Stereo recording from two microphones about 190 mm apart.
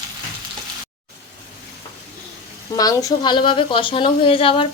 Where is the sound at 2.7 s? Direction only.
20° left (ahead or behind).